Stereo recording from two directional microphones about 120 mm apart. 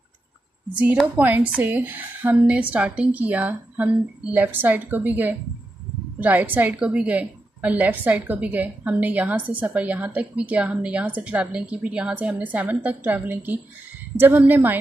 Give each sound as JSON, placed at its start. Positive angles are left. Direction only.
{"t": 0.7, "sound": "a woman's voice", "side_deg": -10}